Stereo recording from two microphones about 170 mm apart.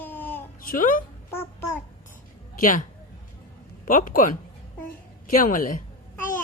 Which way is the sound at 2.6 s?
55° left (ahead or behind).